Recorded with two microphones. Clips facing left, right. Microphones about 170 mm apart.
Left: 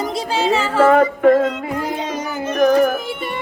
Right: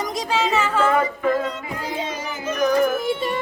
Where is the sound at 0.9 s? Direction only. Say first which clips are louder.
Left 8 dB; 65° left (ahead or behind).